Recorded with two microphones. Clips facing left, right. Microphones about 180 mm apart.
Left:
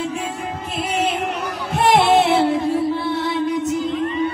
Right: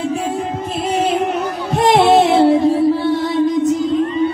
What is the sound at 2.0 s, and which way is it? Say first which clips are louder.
Music: right 4 dB; 35° right (ahead or behind).